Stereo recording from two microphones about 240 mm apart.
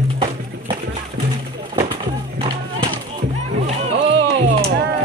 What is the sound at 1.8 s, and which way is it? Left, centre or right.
Run, centre.